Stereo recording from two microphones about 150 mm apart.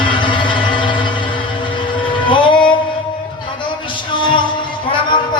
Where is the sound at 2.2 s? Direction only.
35° left (ahead or behind).